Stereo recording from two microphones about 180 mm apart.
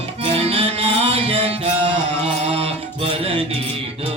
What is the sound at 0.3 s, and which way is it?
Music, 35° right (ahead or behind).